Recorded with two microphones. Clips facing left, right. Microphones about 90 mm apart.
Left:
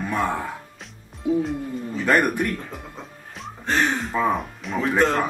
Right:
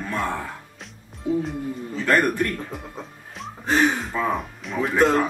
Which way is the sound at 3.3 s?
Centre (ahead or behind).